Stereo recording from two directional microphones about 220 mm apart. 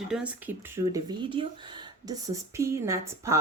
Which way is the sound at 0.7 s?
15° right (ahead or behind).